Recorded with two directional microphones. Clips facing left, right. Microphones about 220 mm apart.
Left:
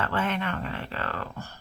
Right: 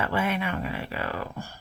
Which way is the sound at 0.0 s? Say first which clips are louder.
Right 1 dB; 10° right (ahead or behind).